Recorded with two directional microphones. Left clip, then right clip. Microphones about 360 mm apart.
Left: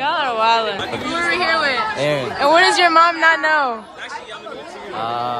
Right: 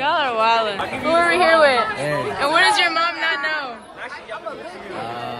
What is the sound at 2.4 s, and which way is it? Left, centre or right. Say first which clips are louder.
A woman's voice: left 3 dB; centre.